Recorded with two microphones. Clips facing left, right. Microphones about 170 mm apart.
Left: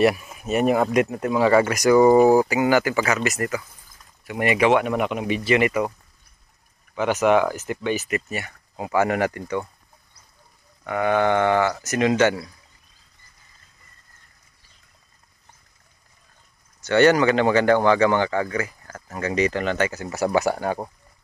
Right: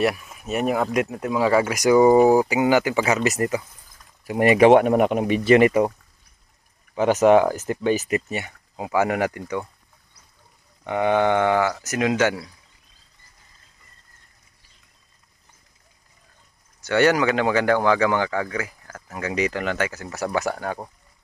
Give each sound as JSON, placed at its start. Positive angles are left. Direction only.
{"t": 0.0, "sound": "speech", "side_deg": 5}
{"t": 5.7, "sound": "speech", "side_deg": -30}
{"t": 7.0, "sound": "speech", "side_deg": -40}
{"t": 8.3, "sound": "speech", "side_deg": -20}
{"t": 10.8, "sound": "speech", "side_deg": -20}
{"t": 16.8, "sound": "speech", "side_deg": -10}